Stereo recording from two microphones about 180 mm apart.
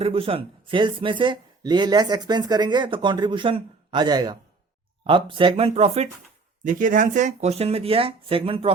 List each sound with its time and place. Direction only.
0.0 s speech: 30° right (ahead or behind)
6.7 s speech: 45° right (ahead or behind); by 8.7 s 30° right (ahead or behind)